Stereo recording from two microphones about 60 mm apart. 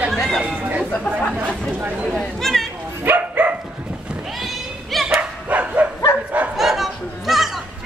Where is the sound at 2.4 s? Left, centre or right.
Centre.